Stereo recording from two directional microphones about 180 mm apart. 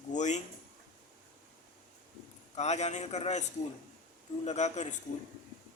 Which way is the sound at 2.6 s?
40° left (ahead or behind).